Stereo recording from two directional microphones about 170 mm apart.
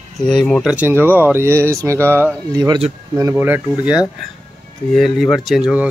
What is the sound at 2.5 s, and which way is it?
Speech, 25° right (ahead or behind).